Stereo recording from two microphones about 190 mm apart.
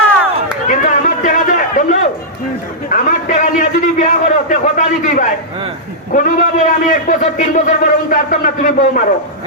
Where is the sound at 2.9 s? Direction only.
40° left (ahead or behind).